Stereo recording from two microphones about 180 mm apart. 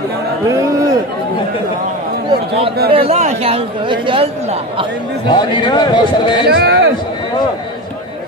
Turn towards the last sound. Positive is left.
turn(degrees=-65)  # may be behind; listen again after turning